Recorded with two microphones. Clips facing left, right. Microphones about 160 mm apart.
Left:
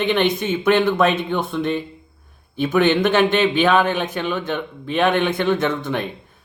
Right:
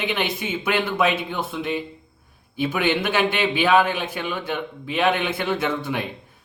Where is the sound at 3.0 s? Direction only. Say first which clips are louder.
Left 5 dB; 50° left (ahead or behind).